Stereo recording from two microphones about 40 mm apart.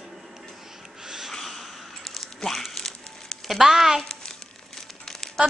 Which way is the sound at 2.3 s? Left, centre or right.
Centre.